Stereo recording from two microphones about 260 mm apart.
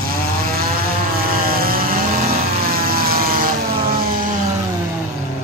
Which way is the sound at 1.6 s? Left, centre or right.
Right.